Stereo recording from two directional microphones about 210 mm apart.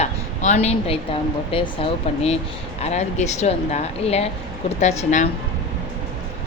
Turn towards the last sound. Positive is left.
turn(degrees=35)  # may be behind; listen again after turning